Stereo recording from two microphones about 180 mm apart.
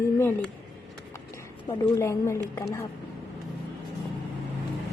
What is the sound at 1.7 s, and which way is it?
A woman's voice, 15° left (ahead or behind).